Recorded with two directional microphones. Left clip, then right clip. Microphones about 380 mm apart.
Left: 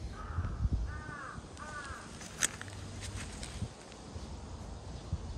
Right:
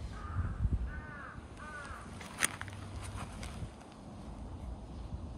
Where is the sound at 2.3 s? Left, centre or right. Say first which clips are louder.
Right 1 dB; centre.